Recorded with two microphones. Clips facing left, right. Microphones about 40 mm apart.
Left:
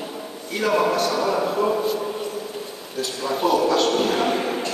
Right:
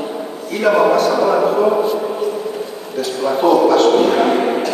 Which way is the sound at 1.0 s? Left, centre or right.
Right.